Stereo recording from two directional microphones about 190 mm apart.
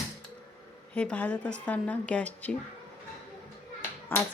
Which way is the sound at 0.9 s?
5° left (ahead or behind).